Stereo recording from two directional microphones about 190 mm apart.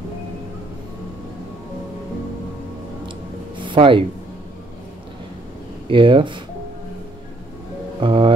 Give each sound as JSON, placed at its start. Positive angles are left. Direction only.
{"t": 3.5, "sound": "music", "side_deg": -25}
{"t": 5.9, "sound": "speech", "side_deg": -25}
{"t": 8.0, "sound": "speech", "side_deg": -25}